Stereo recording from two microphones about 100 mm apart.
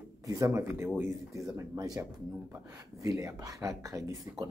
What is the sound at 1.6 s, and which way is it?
Speech, 35° right (ahead or behind).